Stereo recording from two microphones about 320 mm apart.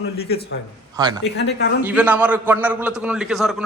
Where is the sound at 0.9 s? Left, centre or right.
Centre.